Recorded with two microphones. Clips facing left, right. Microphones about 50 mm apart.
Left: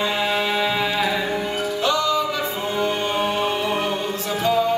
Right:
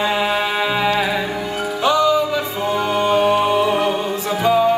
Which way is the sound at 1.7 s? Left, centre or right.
Centre.